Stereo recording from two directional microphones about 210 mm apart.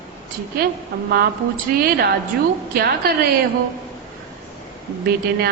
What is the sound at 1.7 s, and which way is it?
A woman's voice, 50° right (ahead or behind).